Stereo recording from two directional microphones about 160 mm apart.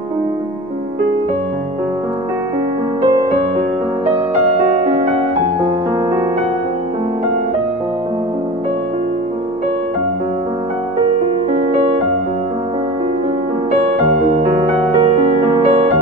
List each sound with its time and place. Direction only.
3.0 s music: 30° right (ahead or behind)
11.5 s music: 35° right (ahead or behind)
14.4 s music: 30° right (ahead or behind)